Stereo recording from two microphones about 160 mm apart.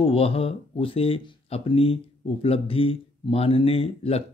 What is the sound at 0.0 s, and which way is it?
Speech, 35° left (ahead or behind).